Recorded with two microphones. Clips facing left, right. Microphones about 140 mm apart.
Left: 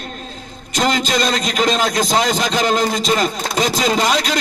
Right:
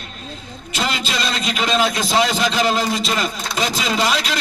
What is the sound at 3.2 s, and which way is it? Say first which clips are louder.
Speech: left 4 dB; 40° left (ahead or behind).